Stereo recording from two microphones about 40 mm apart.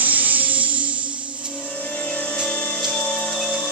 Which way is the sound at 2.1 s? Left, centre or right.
Left.